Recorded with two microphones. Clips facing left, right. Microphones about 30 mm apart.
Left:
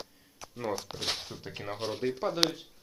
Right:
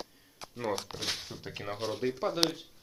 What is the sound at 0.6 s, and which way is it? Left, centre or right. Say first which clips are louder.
Speech: even; right.